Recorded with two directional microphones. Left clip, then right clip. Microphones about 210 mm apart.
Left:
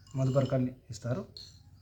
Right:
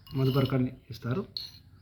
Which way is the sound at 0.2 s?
35° left (ahead or behind).